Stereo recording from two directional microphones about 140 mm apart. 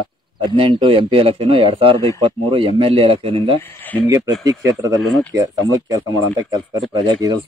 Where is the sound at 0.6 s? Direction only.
35° right (ahead or behind).